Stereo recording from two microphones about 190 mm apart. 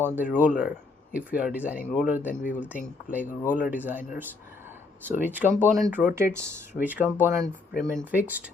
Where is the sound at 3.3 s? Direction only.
45° left (ahead or behind).